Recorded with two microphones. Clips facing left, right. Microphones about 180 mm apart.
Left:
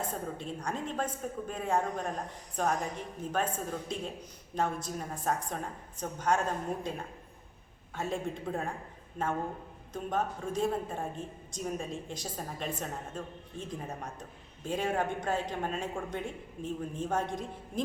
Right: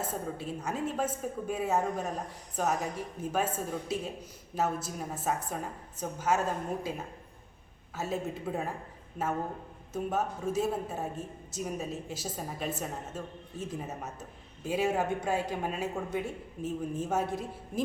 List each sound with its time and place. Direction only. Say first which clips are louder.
0.0 s a woman's voice: right 1 dB; 5° right (ahead or behind)
7.9 s a woman's voice: right 1 dB; 5° right (ahead or behind)